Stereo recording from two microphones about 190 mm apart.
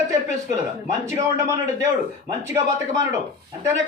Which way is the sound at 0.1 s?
15° right (ahead or behind).